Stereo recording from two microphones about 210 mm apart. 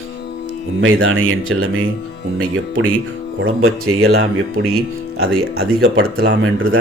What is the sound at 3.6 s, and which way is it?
Speech, 80° right.